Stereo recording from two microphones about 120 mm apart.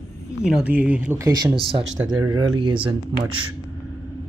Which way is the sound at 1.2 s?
30° right (ahead or behind).